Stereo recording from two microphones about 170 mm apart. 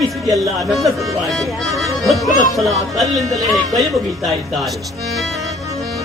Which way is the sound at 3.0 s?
20° right (ahead or behind).